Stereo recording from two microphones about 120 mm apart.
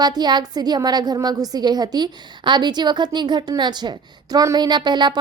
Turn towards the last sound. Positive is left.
turn(degrees=-40)  # may be behind; listen again after turning